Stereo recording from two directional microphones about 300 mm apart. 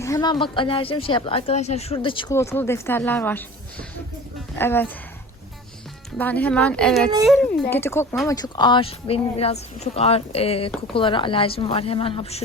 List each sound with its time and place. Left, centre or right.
0.0 s a woman's voice: centre
6.1 s a woman's voice: centre